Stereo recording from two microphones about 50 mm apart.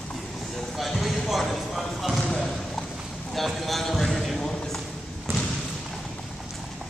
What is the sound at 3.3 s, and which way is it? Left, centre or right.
Clip-clop, centre.